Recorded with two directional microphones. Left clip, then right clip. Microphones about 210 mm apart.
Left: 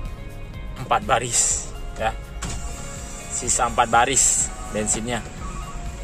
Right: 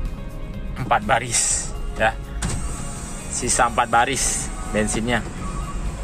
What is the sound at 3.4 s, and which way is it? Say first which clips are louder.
Speech: right 1 dB; 5° left (ahead or behind).